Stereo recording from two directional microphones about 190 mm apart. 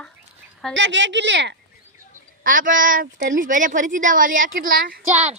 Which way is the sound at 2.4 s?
45° right (ahead or behind).